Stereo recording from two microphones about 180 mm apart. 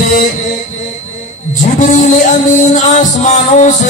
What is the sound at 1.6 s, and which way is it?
Music, 45° left (ahead or behind).